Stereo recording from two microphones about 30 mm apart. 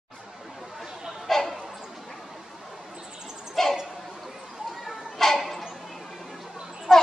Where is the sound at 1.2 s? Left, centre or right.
Centre.